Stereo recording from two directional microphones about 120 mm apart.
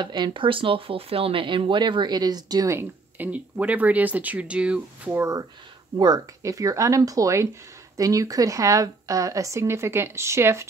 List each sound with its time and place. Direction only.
0.0 s speech: 40° right (ahead or behind)
2.8 s speech: 15° right (ahead or behind)
5.1 s speech: 25° right (ahead or behind)